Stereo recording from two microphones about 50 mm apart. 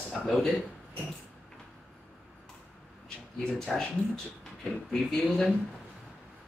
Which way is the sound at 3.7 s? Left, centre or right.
Centre.